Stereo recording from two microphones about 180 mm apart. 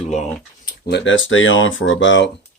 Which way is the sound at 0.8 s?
80° left.